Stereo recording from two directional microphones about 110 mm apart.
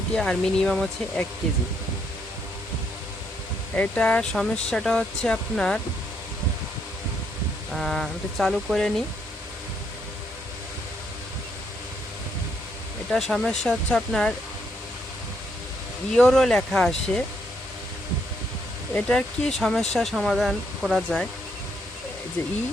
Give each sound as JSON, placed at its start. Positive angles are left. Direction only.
{"t": 0.1, "sound": "speech", "side_deg": 5}
{"t": 3.8, "sound": "speech", "side_deg": 10}
{"t": 7.7, "sound": "speech", "side_deg": 0}
{"t": 13.1, "sound": "speech", "side_deg": 0}
{"t": 16.1, "sound": "speech", "side_deg": 5}
{"t": 18.9, "sound": "speech", "side_deg": 5}